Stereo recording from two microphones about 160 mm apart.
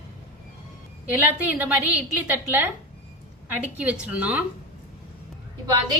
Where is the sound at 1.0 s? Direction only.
10° right (ahead or behind).